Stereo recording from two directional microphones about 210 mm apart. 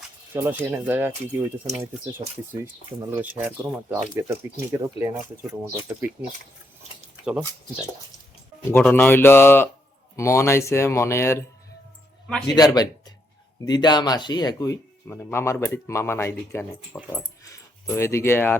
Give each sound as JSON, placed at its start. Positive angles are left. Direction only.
{"t": 0.3, "sound": "speech", "side_deg": -10}
{"t": 7.3, "sound": "speech", "side_deg": -5}
{"t": 8.7, "sound": "speech", "side_deg": 10}
{"t": 12.5, "sound": "speech", "side_deg": 20}